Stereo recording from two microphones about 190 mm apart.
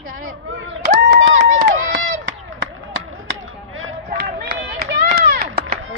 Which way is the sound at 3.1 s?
90° right.